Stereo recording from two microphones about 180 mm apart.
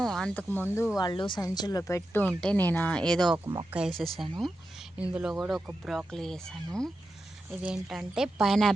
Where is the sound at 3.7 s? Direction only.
Centre (ahead or behind).